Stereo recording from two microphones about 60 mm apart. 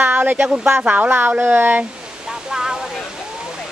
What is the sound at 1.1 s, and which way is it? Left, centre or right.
Speech, right.